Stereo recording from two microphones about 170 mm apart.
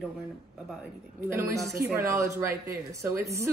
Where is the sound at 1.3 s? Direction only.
15° right (ahead or behind).